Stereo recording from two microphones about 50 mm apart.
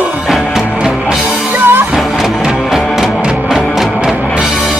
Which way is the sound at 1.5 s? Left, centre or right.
Right.